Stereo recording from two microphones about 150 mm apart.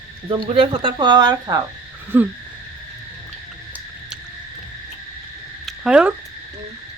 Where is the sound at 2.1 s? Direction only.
15° right (ahead or behind).